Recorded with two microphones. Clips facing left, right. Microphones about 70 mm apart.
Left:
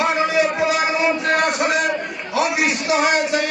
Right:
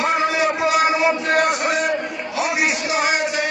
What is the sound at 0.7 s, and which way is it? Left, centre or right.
Music, centre.